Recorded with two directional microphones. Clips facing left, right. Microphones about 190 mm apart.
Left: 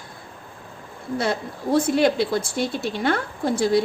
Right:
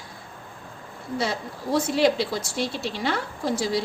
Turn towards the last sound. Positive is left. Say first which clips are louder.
# left 5 dB
turn(degrees=55)  # may be behind; listen again after turning